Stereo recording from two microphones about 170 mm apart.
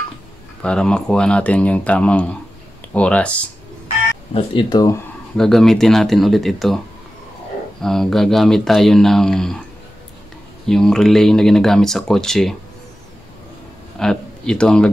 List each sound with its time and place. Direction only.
0.6 s speech: 5° left (ahead or behind)
4.3 s speech: 25° left (ahead or behind)
5.4 s speech: centre (ahead or behind)
7.8 s speech: centre (ahead or behind)
10.7 s speech: 5° left (ahead or behind)
13.9 s speech: 5° left (ahead or behind)